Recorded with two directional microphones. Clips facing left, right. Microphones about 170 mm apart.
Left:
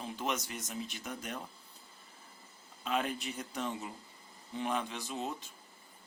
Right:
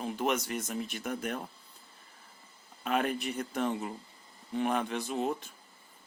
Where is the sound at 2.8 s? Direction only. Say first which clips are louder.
Right 4 dB; 55° right (ahead or behind).